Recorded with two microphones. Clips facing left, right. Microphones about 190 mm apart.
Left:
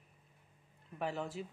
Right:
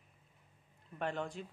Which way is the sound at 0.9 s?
5° left (ahead or behind).